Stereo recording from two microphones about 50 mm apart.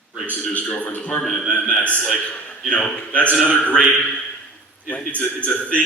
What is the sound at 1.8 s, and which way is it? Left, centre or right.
A man's voice, left.